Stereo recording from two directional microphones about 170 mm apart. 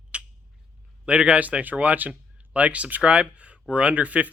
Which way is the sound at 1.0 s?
5° right (ahead or behind).